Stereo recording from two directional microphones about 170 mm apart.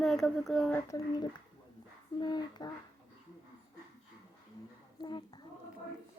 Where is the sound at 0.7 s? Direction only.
20° left (ahead or behind).